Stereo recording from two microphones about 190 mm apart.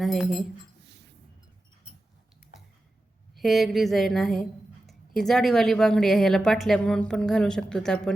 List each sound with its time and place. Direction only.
0.0 s a woman's voice: centre (ahead or behind)
0.9 s a sound: 65° right (ahead or behind)
3.3 s a woman's voice: centre (ahead or behind)